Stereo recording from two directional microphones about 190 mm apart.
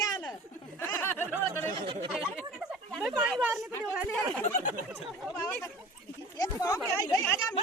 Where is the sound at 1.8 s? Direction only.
30° right (ahead or behind).